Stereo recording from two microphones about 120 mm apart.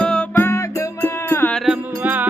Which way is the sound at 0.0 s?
5° left (ahead or behind).